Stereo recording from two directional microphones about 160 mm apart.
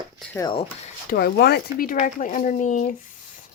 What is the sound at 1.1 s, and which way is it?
Speech, 75° left (ahead or behind).